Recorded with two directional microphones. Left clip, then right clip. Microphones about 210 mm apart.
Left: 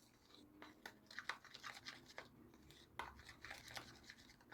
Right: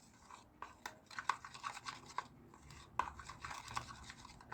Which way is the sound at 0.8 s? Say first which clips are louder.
Right 5 dB; centre (ahead or behind).